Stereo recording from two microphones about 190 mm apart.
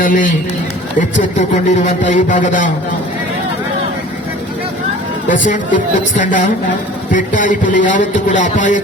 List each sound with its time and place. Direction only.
0.0 s a man's voice: 45° left (ahead or behind)
5.5 s a man's voice: 45° left (ahead or behind)